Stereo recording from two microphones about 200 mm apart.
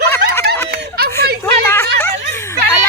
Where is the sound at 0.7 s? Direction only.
50° right (ahead or behind).